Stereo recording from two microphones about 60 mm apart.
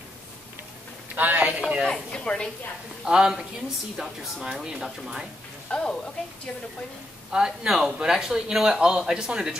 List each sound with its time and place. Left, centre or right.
1.1 s a sound: right
1.6 s speech: centre
1.9 s speech: centre
3.1 s speech: centre
5.7 s speech: centre
7.2 s speech: centre